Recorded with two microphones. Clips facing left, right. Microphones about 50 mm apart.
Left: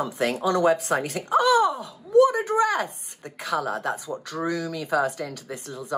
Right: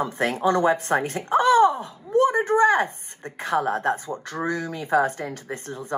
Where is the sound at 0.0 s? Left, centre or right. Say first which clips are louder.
Right 2 dB; right.